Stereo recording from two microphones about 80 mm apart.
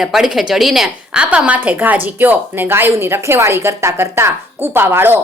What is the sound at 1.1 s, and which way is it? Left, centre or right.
A woman's voice, centre.